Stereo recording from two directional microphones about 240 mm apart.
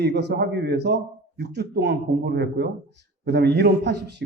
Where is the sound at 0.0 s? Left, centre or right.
Right.